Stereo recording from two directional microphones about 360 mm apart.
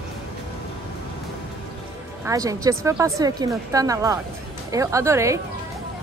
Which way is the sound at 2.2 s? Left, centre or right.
Centre.